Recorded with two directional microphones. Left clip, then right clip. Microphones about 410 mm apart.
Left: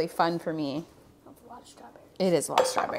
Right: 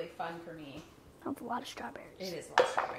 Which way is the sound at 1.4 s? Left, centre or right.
Right.